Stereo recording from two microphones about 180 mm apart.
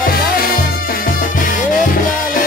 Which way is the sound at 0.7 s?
55° left (ahead or behind).